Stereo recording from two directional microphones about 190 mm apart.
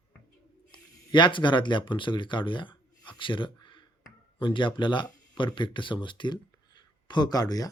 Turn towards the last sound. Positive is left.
turn(degrees=20)  # may be behind; listen again after turning